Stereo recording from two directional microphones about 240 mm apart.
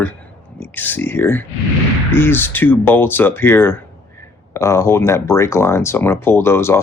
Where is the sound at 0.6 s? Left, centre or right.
Centre.